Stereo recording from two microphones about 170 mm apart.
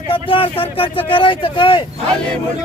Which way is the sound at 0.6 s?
30° left (ahead or behind).